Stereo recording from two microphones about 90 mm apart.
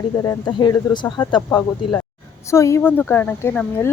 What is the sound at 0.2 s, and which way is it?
Speech, 40° left (ahead or behind).